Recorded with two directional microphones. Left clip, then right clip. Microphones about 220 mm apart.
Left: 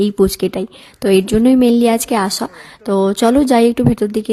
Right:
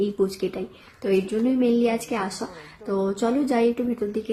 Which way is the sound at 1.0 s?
45° left (ahead or behind).